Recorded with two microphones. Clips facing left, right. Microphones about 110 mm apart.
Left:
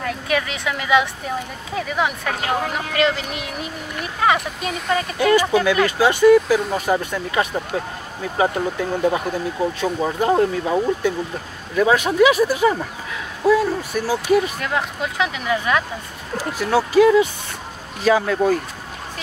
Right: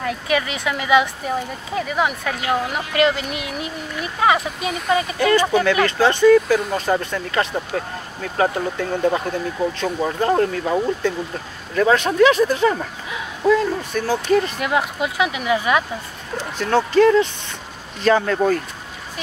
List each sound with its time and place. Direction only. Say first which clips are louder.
0.0 s speech: right 1 dB; 5° right (ahead or behind)
2.3 s speech: right 1 dB; 45° left (ahead or behind)
2.9 s speech: right 3 dB; centre (ahead or behind)
5.2 s speech: left 2 dB; 10° left (ahead or behind)
14.6 s speech: right 3 dB; 10° right (ahead or behind)
16.3 s speech: even; 10° left (ahead or behind)